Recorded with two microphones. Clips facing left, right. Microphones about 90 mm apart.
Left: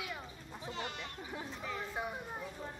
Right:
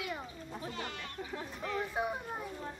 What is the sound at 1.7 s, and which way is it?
Speech, 20° right (ahead or behind).